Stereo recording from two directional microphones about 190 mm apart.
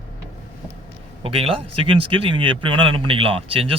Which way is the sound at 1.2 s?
30° right (ahead or behind).